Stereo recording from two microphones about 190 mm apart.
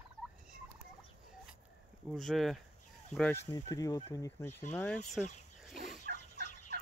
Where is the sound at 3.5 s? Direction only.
20° left (ahead or behind).